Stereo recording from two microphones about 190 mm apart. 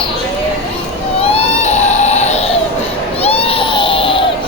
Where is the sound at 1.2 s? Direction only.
35° left (ahead or behind).